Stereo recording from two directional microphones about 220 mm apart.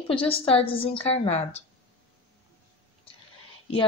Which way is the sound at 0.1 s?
25° left (ahead or behind).